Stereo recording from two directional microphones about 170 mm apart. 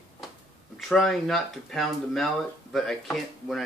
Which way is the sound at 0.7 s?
5° left (ahead or behind).